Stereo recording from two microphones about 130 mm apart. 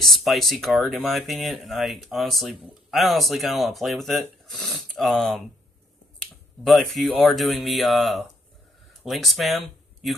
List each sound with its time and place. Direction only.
0.0 s speech: centre (ahead or behind)
6.6 s speech: centre (ahead or behind)